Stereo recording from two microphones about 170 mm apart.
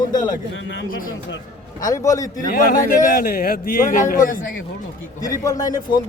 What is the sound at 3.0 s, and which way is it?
A man's voice, 55° left (ahead or behind).